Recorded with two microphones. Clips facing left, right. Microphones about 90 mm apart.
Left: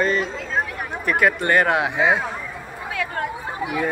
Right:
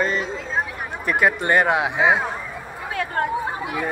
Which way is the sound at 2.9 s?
35° right (ahead or behind).